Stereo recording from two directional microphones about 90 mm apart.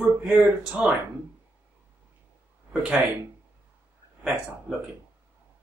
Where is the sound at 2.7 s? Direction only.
10° right (ahead or behind).